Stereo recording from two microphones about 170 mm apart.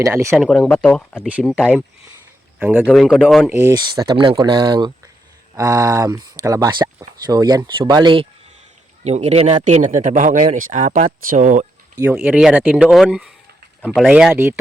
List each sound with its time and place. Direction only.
0.0 s speech: 15° right (ahead or behind)
0.4 s speech: 5° left (ahead or behind)
1.3 s speech: 5° right (ahead or behind)
1.5 s speech: 5° left (ahead or behind)
2.6 s speech: 10° right (ahead or behind)
2.8 s speech: centre (ahead or behind)
3.8 s speech: 25° right (ahead or behind)
9.0 s speech: 40° right (ahead or behind)
11.9 s speech: 15° right (ahead or behind)
14.3 s speech: 15° right (ahead or behind)